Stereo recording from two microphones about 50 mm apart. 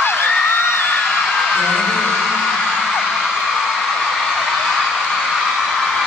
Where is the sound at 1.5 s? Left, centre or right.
Centre.